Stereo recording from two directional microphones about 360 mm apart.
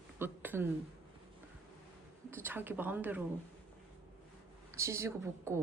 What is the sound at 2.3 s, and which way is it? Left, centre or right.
Speech, centre.